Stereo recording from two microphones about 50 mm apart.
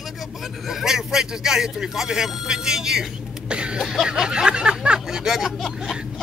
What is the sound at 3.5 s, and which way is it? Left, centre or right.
Cough, right.